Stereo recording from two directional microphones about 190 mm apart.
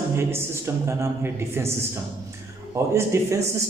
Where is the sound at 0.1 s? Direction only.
15° right (ahead or behind).